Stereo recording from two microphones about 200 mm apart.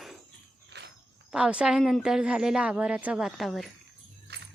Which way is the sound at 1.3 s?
5° right (ahead or behind).